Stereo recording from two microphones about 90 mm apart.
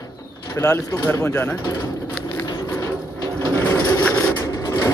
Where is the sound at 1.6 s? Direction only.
35° left (ahead or behind).